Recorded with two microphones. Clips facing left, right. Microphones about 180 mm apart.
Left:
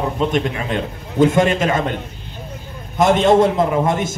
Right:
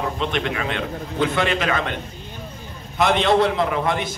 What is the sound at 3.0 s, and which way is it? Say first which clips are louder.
A man's voice: left 5 dB; 45° left (ahead or behind).